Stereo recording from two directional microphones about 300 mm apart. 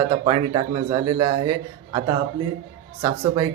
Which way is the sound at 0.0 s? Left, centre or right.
Centre.